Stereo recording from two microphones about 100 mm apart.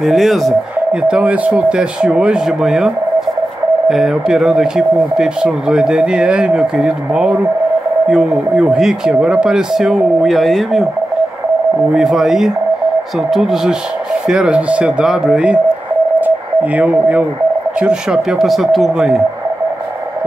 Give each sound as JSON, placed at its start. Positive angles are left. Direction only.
{"t": 0.0, "sound": "speech", "side_deg": 0}
{"t": 1.0, "sound": "speech", "side_deg": -10}
{"t": 3.9, "sound": "speech", "side_deg": -5}
{"t": 11.9, "sound": "speech", "side_deg": -5}
{"t": 16.2, "sound": "radio", "side_deg": -15}
{"t": 17.7, "sound": "speech", "side_deg": -10}